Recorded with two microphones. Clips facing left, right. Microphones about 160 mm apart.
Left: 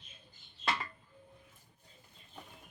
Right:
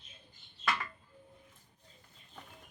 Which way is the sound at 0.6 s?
30° left (ahead or behind).